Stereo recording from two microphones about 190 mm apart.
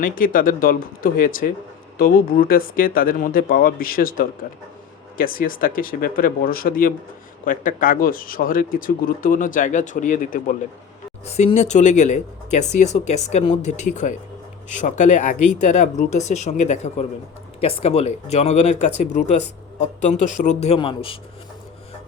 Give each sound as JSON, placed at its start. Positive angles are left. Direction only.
{"t": 0.0, "sound": "speech", "side_deg": 45}
{"t": 11.3, "sound": "speech", "side_deg": 35}